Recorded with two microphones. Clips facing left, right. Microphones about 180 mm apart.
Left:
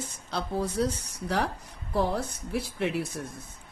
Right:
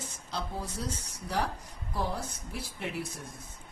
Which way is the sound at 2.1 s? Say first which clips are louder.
Left 8 dB; 70° left (ahead or behind).